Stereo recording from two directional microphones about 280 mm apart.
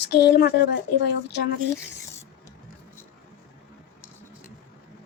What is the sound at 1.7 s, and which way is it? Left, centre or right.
Speech, centre.